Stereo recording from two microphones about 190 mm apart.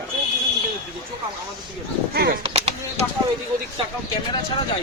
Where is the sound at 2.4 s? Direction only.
35° right (ahead or behind).